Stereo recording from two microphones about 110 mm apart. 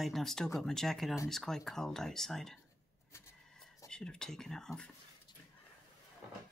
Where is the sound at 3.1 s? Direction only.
25° left (ahead or behind).